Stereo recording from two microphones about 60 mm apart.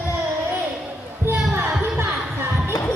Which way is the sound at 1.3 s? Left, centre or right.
Right.